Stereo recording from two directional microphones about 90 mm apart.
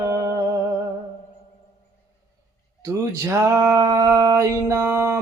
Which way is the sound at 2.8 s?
40° right (ahead or behind).